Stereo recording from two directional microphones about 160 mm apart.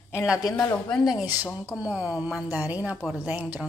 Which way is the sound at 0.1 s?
5° right (ahead or behind).